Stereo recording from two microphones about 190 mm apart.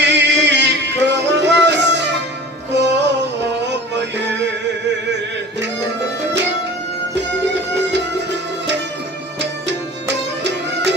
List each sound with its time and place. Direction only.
0.0 s music: 65° right (ahead or behind)